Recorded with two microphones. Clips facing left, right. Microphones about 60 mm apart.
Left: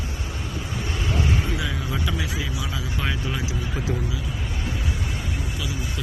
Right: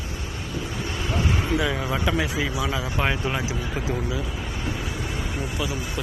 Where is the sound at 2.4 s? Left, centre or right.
Right.